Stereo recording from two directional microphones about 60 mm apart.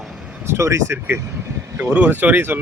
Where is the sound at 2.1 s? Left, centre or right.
Right.